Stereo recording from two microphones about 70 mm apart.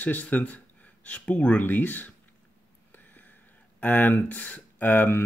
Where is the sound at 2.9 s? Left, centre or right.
Left.